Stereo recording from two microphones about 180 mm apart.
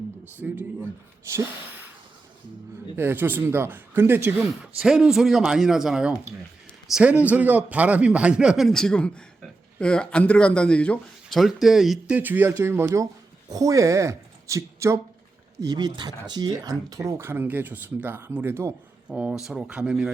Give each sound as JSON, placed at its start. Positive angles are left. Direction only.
{"t": 0.4, "sound": "speech", "side_deg": -10}
{"t": 2.9, "sound": "a man's voice", "side_deg": -10}